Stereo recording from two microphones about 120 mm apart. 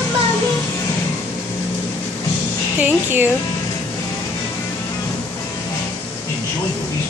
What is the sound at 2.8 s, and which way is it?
Speech, 15° right (ahead or behind).